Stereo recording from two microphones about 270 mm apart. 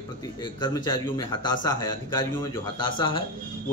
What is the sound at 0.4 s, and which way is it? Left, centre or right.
A man's voice, centre.